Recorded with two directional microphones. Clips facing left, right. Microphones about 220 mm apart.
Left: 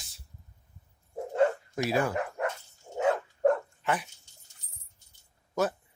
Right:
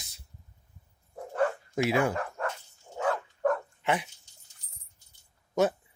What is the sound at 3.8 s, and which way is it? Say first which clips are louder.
Speech: right 2 dB; 25° right (ahead or behind).